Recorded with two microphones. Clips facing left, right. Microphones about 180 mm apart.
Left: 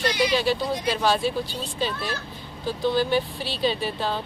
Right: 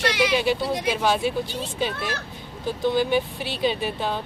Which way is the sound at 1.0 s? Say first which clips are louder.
Even; 15° right (ahead or behind).